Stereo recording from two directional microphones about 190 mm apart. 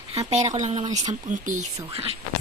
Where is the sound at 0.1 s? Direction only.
35° right (ahead or behind).